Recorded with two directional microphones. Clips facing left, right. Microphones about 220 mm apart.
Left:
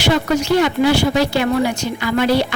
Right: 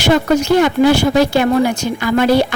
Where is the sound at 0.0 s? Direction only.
45° right (ahead or behind).